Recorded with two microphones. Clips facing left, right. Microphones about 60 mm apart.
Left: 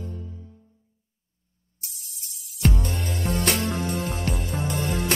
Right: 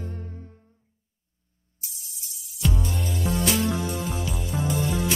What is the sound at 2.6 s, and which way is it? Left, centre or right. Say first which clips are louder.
Music: left 2 dB; left.